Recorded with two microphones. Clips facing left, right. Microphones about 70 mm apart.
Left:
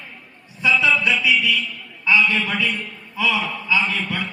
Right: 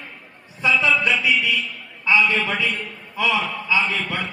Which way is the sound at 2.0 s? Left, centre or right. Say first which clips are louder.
Even; right.